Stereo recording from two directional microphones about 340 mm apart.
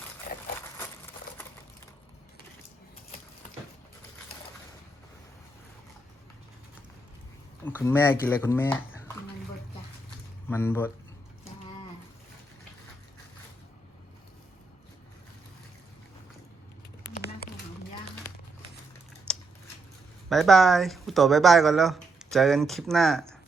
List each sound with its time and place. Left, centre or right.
0.3 s a sound: left
7.9 s speech: centre
10.5 s speech: centre
19.3 s scissors: centre
20.3 s speech: centre